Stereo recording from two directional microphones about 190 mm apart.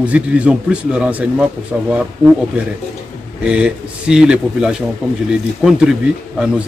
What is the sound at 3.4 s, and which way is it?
A man's voice, 5° right (ahead or behind).